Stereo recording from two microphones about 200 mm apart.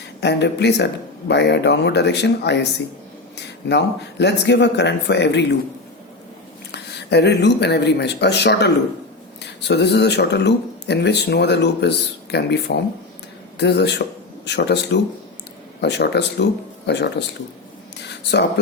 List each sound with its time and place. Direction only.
0.2 s speech: 60° left (ahead or behind)
6.7 s speech: 55° left (ahead or behind)